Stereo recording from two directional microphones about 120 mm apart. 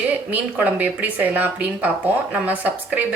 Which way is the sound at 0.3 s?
10° right (ahead or behind).